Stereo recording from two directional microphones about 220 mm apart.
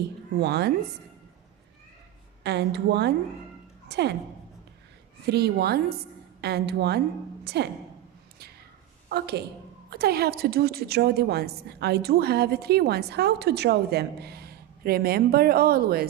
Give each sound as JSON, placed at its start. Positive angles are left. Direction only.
{"t": 0.3, "sound": "a woman's voice", "side_deg": -50}
{"t": 2.4, "sound": "a woman's voice", "side_deg": -50}
{"t": 5.2, "sound": "a woman's voice", "side_deg": -50}
{"t": 9.0, "sound": "a woman's voice", "side_deg": -45}